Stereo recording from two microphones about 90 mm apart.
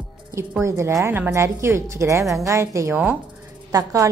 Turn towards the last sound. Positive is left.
turn(degrees=-40)  # may be behind; listen again after turning